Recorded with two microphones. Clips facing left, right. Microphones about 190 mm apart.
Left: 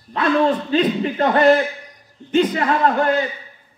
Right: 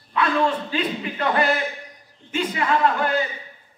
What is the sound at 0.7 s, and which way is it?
A man's voice, 40° left (ahead or behind).